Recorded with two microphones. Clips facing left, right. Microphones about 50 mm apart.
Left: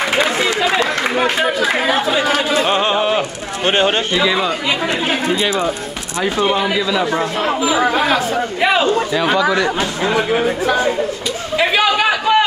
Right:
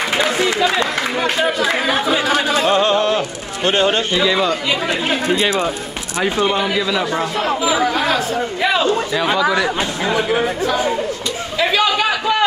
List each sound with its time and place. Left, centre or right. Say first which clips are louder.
1.1 s a man's voice: left 1 dB; centre
2.6 s speech: right 1 dB; left
3.2 s speech: left 1 dB; left
4.1 s a man's voice: even; centre
6.4 s speech: left 3 dB; centre
7.9 s speech: left 2 dB; left
9.2 s speech: left 1 dB; centre
11.5 s a sound: left 2 dB; centre